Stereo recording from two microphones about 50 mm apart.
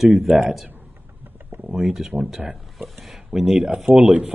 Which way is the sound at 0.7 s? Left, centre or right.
Right.